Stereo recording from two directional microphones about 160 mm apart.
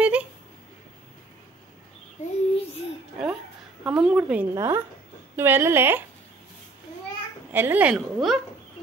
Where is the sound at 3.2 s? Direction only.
Centre (ahead or behind).